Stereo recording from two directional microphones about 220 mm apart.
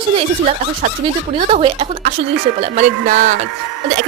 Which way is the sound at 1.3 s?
25° right (ahead or behind).